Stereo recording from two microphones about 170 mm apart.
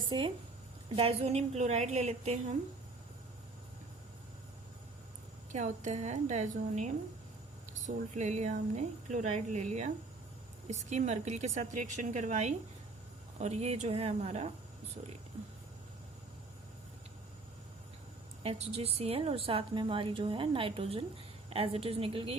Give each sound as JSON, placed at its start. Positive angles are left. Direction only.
{"t": 0.1, "sound": "a woman's voice", "side_deg": -30}
{"t": 5.5, "sound": "a woman's voice", "side_deg": -45}
{"t": 18.4, "sound": "a woman's voice", "side_deg": -35}